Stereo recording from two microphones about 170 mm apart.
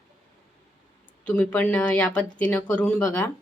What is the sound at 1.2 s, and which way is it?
Speech, 10° left (ahead or behind).